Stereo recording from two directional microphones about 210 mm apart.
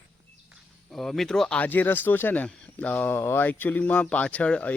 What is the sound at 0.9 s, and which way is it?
Speech, centre (ahead or behind).